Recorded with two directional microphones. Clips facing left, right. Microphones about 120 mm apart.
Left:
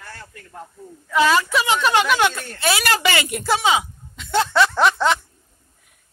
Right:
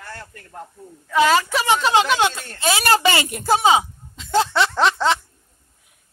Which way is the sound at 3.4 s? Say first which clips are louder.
Right 4 dB; 40° right (ahead or behind).